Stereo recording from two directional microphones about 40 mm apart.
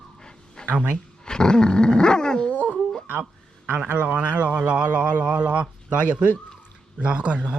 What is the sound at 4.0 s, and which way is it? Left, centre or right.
A man's voice, right.